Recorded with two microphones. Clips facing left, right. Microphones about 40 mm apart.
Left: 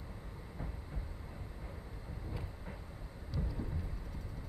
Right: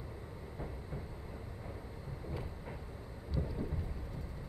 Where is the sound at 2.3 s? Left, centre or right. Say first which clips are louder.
Right 4 dB; centre.